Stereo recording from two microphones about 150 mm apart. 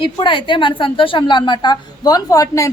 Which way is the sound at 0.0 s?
35° left (ahead or behind).